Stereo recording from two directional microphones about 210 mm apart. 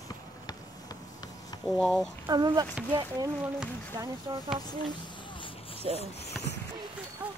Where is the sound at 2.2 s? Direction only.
20° right (ahead or behind).